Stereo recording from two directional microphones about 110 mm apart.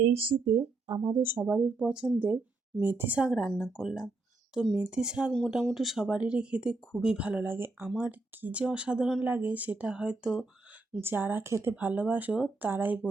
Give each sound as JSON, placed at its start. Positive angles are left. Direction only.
{"t": 0.0, "sound": "speech", "side_deg": -65}
{"t": 0.9, "sound": "speech", "side_deg": -35}
{"t": 1.2, "sound": "speech", "side_deg": -20}
{"t": 11.0, "sound": "speech", "side_deg": -20}